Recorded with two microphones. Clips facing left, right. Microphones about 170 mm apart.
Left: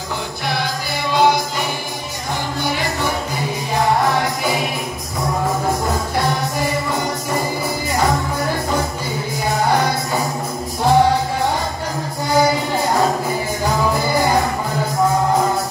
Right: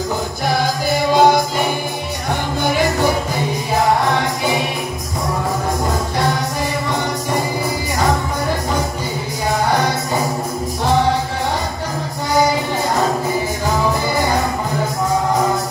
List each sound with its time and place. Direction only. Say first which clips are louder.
0.5 s music: right 6 dB; 45° right (ahead or behind)